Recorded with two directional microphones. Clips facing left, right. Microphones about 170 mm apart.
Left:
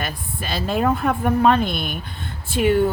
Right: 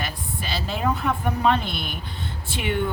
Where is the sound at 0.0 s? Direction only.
50° left (ahead or behind).